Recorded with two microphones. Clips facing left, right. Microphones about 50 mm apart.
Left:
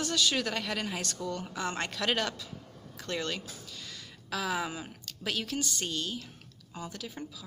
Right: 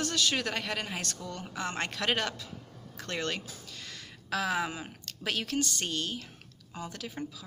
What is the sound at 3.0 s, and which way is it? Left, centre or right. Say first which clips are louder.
Speech: even; right.